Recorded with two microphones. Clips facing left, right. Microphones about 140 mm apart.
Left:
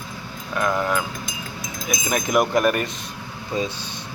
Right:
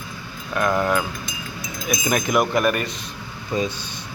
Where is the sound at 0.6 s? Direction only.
15° right (ahead or behind).